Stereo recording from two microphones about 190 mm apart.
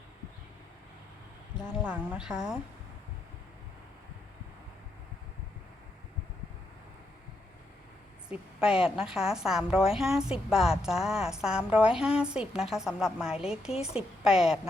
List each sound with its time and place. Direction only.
1.5 s a woman's voice: 5° right (ahead or behind)
8.3 s a woman's voice: 5° right (ahead or behind)
13.7 s a woman's voice: 30° left (ahead or behind)
14.3 s a woman's voice: 5° right (ahead or behind)